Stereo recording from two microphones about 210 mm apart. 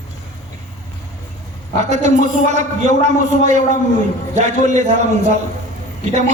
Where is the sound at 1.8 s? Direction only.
35° right (ahead or behind).